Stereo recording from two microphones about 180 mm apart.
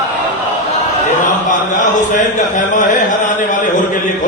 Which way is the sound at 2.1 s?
45° left (ahead or behind).